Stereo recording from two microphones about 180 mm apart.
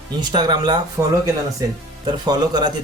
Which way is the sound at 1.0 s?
15° right (ahead or behind).